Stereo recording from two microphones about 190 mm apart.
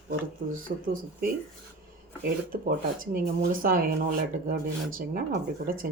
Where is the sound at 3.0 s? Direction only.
50° right (ahead or behind).